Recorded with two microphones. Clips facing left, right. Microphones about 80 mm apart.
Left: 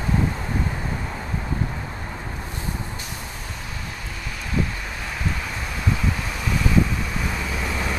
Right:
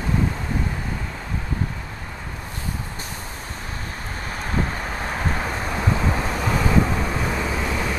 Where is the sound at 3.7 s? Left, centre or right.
Right.